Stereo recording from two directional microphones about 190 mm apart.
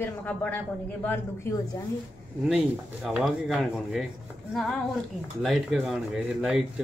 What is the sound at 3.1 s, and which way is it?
Speech, centre (ahead or behind).